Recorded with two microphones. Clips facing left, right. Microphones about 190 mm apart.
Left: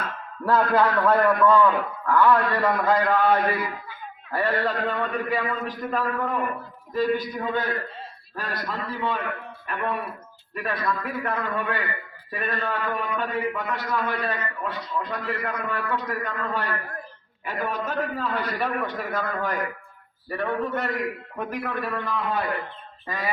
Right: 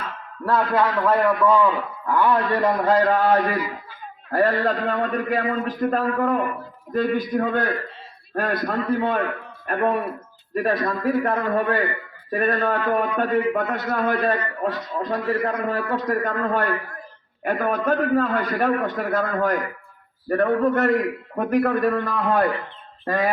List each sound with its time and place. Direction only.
0.4 s a man's voice: centre (ahead or behind); by 2.7 s 20° right (ahead or behind)
2.7 s a man's voice: 40° right (ahead or behind)